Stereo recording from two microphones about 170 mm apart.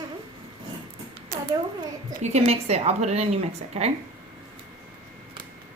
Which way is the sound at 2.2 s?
40° right (ahead or behind).